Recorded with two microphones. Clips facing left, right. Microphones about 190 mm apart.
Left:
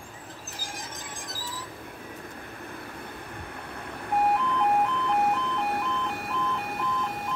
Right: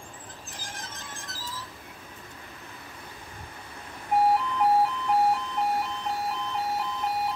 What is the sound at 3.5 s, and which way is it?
Vehicle, 60° left (ahead or behind).